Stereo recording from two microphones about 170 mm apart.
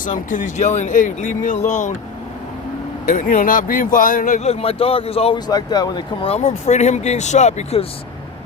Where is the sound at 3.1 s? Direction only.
50° left (ahead or behind); by 5.4 s 35° left (ahead or behind).